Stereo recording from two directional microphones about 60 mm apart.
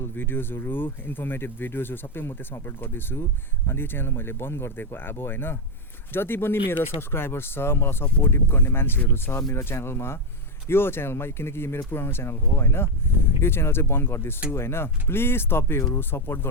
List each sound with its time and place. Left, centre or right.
0.0 s speech: left